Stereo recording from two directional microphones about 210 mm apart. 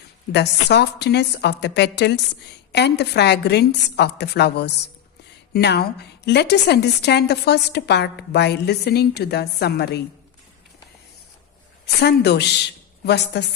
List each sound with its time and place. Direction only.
0.3 s a woman's voice: 50° left (ahead or behind)
11.9 s a woman's voice: 50° left (ahead or behind)